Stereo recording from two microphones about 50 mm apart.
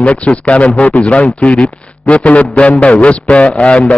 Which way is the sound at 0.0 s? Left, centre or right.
Left.